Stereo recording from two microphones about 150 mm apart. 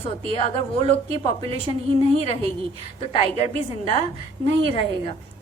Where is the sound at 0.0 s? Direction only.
40° left (ahead or behind).